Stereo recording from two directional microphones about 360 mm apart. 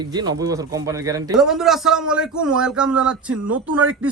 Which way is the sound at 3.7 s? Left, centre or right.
Right.